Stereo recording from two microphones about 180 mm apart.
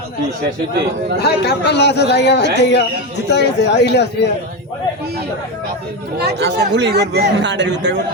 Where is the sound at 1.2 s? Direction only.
65° left (ahead or behind).